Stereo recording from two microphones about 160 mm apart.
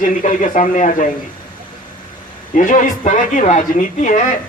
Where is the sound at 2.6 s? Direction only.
55° left (ahead or behind).